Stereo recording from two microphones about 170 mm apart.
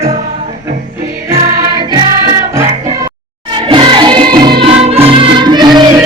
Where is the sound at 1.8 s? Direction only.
20° right (ahead or behind).